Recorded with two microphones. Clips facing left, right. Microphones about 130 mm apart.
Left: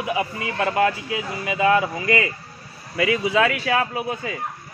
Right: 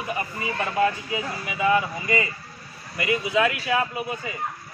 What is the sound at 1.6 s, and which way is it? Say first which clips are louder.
Speech: left 3 dB; 90° left.